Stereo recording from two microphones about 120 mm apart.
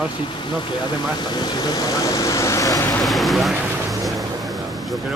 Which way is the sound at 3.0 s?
Centre (ahead or behind).